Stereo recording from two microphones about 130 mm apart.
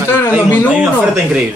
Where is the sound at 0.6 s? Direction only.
10° right (ahead or behind).